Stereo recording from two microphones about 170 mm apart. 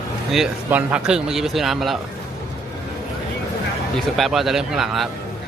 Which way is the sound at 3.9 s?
Centre (ahead or behind).